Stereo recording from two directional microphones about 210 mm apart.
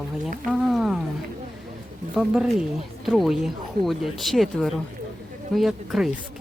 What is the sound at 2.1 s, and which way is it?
Speech, 5° right (ahead or behind).